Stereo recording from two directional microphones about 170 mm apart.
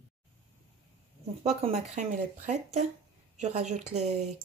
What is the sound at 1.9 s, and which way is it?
Speech, 45° right (ahead or behind).